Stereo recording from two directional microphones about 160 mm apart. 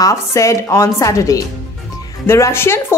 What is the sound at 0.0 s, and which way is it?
A woman's voice, 20° left (ahead or behind).